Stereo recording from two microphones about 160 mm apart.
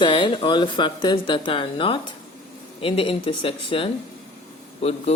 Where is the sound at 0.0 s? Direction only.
30° left (ahead or behind).